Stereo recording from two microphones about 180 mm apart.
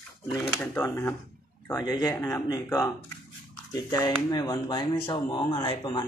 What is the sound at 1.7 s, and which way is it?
Speech, 20° left (ahead or behind).